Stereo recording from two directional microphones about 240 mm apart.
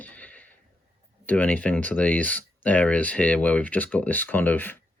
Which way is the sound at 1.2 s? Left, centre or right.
Centre.